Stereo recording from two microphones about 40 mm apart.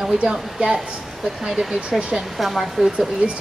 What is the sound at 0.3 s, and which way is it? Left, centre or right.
Speech, right.